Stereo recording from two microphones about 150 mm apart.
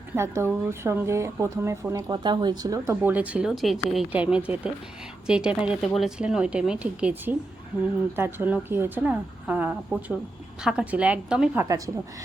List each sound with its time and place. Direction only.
0.2 s a woman's voice: 20° right (ahead or behind)